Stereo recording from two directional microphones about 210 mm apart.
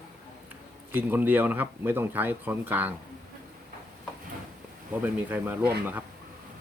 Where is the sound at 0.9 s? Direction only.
10° right (ahead or behind).